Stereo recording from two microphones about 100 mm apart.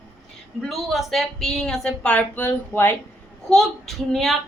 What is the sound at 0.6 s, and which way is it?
A child's voice, centre (ahead or behind).